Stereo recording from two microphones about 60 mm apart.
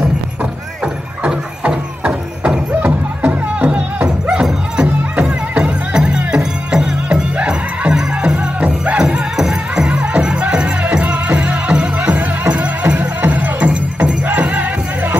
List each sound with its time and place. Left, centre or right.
1.2 s music: centre
2.8 s music: right
4.3 s music: centre
4.8 s music: right
8.9 s music: centre